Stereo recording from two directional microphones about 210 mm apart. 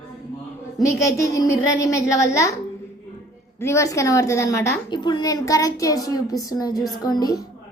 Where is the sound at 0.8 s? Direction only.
15° left (ahead or behind).